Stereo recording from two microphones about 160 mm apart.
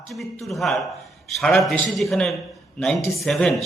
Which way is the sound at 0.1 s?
Centre (ahead or behind).